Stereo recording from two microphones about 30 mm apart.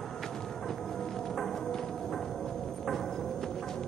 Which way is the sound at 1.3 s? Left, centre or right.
Centre.